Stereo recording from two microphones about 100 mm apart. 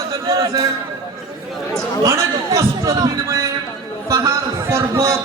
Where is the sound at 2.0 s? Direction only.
30° right (ahead or behind).